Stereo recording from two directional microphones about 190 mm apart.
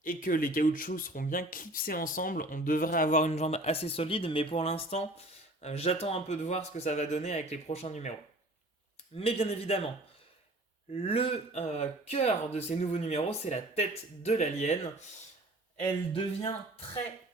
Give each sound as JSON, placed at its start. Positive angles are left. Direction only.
{"t": 0.0, "sound": "speech", "side_deg": 45}
{"t": 9.1, "sound": "speech", "side_deg": 30}
{"t": 10.9, "sound": "speech", "side_deg": 30}
{"t": 15.8, "sound": "speech", "side_deg": 25}